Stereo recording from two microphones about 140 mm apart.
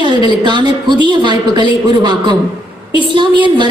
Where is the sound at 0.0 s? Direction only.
35° right (ahead or behind).